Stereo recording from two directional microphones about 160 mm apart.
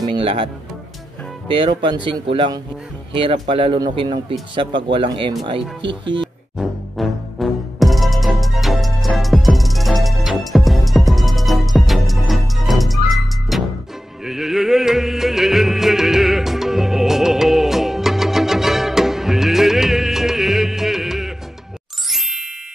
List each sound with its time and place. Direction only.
0.1 s a man's voice: 35° right (ahead or behind)
1.5 s a man's voice: 35° right (ahead or behind)
6.6 s music: centre (ahead or behind)
22.0 s ding: centre (ahead or behind)